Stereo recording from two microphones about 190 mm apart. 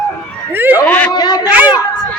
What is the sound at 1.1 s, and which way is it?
Speech, 20° left (ahead or behind).